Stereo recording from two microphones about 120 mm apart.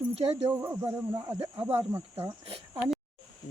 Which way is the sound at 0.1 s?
60° right (ahead or behind).